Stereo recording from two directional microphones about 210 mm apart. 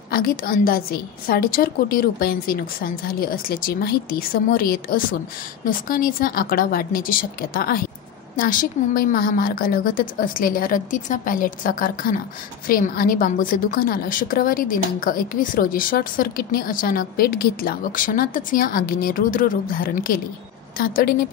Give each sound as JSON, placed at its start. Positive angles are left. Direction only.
{"t": 0.1, "sound": "a woman's voice", "side_deg": 45}